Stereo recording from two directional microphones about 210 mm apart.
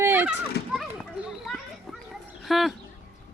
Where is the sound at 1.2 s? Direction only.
Centre (ahead or behind).